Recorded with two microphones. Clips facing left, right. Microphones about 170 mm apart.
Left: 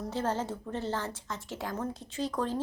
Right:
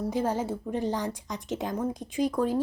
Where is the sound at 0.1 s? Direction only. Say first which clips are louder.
Right 2 dB; 10° right (ahead or behind).